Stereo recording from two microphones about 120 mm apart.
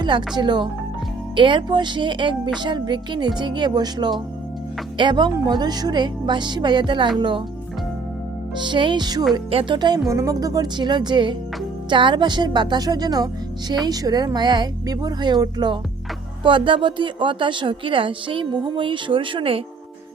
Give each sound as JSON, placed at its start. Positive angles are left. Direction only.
{"t": 0.0, "sound": "a woman's voice", "side_deg": -40}
{"t": 8.5, "sound": "a woman's voice", "side_deg": -40}
{"t": 9.5, "sound": "a woman's voice", "side_deg": -50}
{"t": 9.7, "sound": "a woman's voice", "side_deg": -40}
{"t": 10.1, "sound": "a woman's voice", "side_deg": -25}